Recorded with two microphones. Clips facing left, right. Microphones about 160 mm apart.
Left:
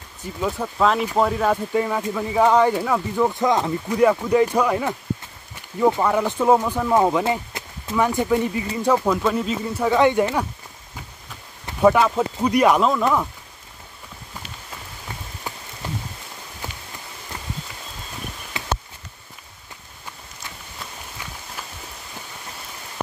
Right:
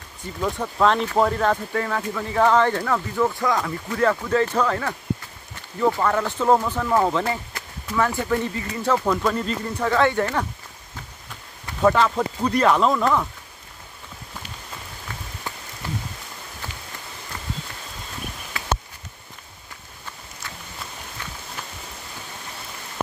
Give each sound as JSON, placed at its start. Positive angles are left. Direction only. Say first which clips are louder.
{"t": 0.2, "sound": "speech", "louder": "left 1 dB", "side_deg": 5}
{"t": 11.8, "sound": "speech", "louder": "left 2 dB", "side_deg": 10}
{"t": 18.6, "sound": "a sound", "louder": "left 2 dB", "side_deg": 20}
{"t": 21.2, "sound": "walk", "louder": "even", "side_deg": 10}